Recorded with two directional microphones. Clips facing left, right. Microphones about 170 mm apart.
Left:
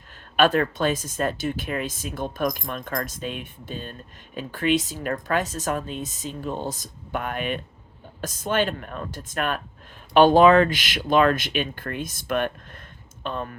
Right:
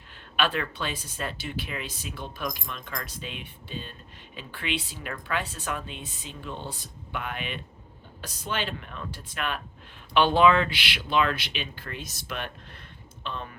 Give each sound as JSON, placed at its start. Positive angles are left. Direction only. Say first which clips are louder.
{"t": 0.3, "sound": "speech", "louder": "left 8 dB", "side_deg": 45}